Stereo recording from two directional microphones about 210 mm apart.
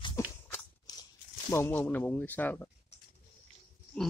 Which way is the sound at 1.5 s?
10° left (ahead or behind).